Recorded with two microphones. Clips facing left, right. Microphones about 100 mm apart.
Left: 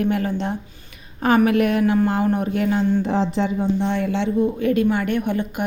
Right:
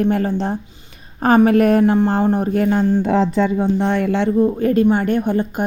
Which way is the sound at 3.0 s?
70° right (ahead or behind).